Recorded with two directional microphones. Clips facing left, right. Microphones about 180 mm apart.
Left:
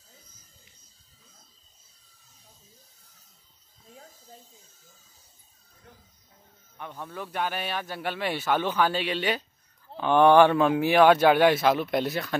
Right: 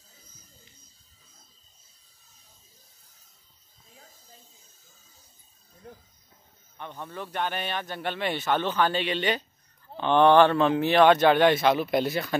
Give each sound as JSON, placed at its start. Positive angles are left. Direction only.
{"t": 6.8, "sound": "a man's voice", "side_deg": 5}